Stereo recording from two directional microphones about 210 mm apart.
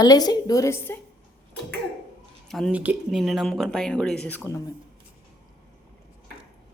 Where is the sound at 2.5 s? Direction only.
Centre (ahead or behind).